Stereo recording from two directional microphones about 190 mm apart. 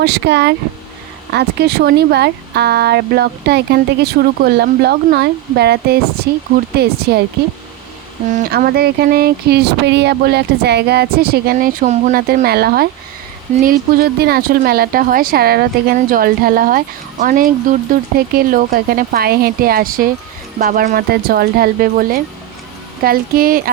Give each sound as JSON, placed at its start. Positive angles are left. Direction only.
{"t": 0.0, "sound": "speech", "side_deg": -60}
{"t": 8.3, "sound": "a woman's voice", "side_deg": -45}